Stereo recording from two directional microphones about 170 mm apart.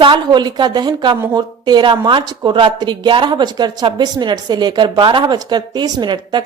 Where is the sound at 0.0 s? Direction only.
25° right (ahead or behind).